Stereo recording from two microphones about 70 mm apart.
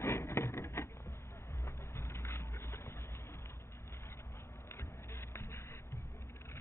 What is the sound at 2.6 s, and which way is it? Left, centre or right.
Music, left.